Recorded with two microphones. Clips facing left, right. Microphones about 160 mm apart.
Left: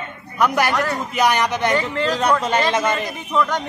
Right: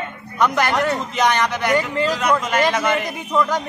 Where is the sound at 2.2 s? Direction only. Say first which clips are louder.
Left 1 dB; 35° left (ahead or behind).